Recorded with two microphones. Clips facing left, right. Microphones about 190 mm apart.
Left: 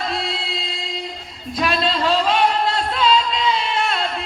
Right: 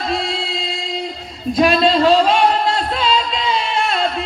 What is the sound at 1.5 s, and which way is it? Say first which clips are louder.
Speech: right 7 dB; 20° right (ahead or behind).